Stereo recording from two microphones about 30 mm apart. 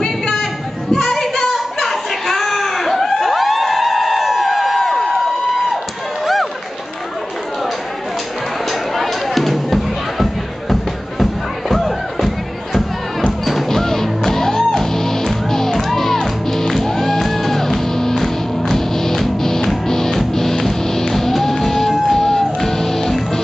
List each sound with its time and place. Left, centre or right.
1.0 s a sound: centre
8.9 s music: centre
11.7 s music: centre
13.7 s music: centre
22.1 s music: centre